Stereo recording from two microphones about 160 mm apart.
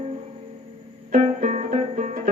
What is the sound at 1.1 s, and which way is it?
Music, 45° right (ahead or behind).